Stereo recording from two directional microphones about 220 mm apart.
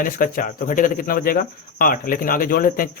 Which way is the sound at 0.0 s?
40° left (ahead or behind).